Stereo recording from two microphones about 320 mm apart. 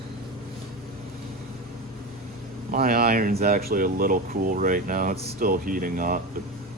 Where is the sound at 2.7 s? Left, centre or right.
Right.